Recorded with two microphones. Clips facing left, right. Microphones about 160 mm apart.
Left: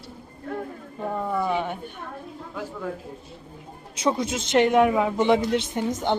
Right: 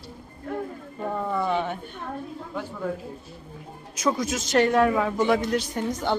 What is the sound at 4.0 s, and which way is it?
Speech, 25° left (ahead or behind).